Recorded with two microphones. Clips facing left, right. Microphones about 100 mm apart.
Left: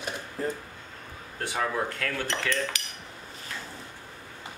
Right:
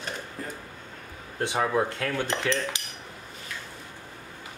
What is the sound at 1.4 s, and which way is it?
Speech, 20° right (ahead or behind).